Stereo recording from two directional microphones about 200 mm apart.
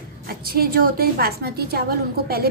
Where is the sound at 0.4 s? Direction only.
50° right (ahead or behind).